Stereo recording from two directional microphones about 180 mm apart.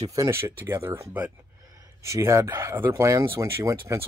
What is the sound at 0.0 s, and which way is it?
Speech, 15° right (ahead or behind).